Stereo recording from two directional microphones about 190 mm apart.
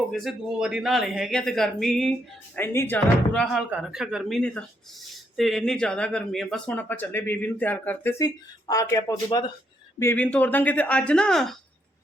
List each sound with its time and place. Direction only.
0.1 s speech: centre (ahead or behind)